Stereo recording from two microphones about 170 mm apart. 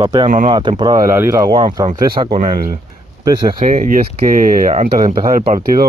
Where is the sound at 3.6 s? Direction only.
50° right (ahead or behind).